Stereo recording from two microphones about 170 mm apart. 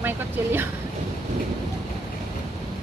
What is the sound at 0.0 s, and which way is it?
Vehicle, 10° right (ahead or behind).